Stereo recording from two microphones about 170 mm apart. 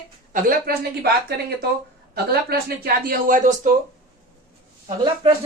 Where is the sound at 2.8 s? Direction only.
60° right (ahead or behind).